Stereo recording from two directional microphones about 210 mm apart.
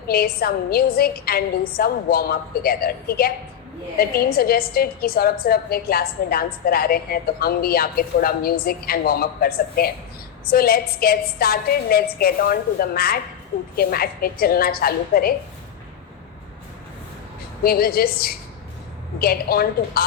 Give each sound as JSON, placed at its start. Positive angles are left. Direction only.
{"t": 0.1, "sound": "a woman's voice", "side_deg": 45}
{"t": 17.6, "sound": "a woman's voice", "side_deg": 45}